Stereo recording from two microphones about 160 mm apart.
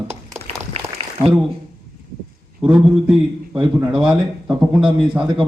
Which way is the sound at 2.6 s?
5° right (ahead or behind).